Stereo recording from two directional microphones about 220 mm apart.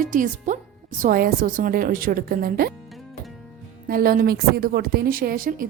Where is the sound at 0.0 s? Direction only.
35° right (ahead or behind).